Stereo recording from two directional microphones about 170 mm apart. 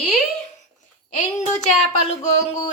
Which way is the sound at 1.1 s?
45° left (ahead or behind).